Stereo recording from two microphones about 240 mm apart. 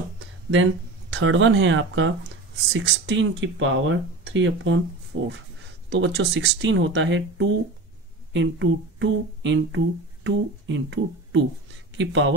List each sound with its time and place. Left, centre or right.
1.1 s speech: right